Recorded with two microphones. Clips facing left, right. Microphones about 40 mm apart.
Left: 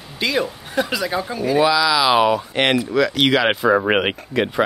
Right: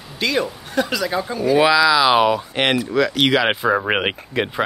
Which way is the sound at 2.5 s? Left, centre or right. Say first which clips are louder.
Left 1 dB; centre.